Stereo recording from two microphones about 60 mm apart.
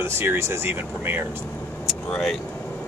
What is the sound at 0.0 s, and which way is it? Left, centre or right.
Speech, right.